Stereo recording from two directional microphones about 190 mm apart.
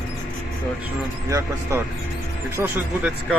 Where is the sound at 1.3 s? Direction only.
15° right (ahead or behind).